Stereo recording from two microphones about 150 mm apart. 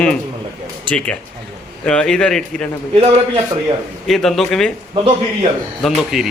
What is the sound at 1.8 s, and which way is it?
Speech, 5° left (ahead or behind).